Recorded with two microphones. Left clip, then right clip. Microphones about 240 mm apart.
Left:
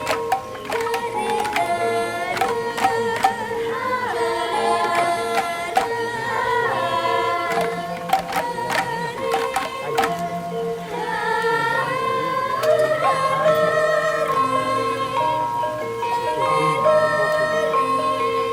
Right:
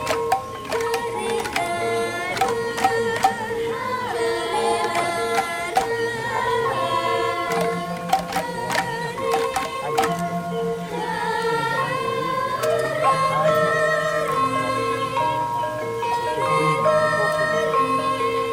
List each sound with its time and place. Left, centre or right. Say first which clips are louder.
4.5 s music: left 3 dB; left
13.0 s music: even; left
16.4 s music: left 1 dB; left